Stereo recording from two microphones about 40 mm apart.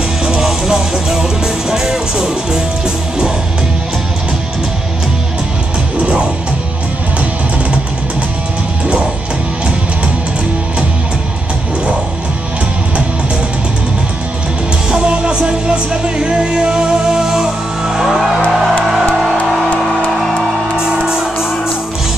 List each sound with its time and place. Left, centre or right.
0.2 s music: centre
14.9 s music: right
18.0 s music: centre
20.1 s music: centre
20.7 s music: centre